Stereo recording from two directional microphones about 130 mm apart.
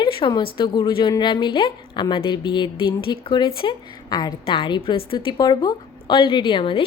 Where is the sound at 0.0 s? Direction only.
40° left (ahead or behind).